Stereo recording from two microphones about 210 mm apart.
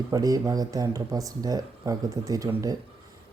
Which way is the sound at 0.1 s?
15° right (ahead or behind).